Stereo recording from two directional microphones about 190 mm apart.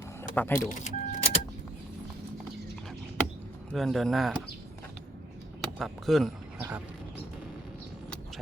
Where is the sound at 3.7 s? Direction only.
Centre (ahead or behind).